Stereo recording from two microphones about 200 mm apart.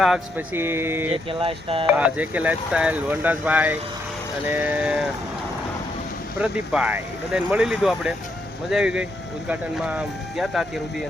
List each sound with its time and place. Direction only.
0.0 s speech: 5° right (ahead or behind)
1.3 s speech: 25° right (ahead or behind)
2.0 s speech: 5° right (ahead or behind)
6.4 s speech: 5° right (ahead or behind)